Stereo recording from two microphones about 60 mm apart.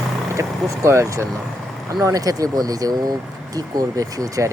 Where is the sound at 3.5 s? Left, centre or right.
Right.